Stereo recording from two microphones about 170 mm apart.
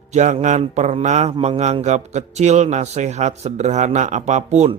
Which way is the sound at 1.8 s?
45° right (ahead or behind).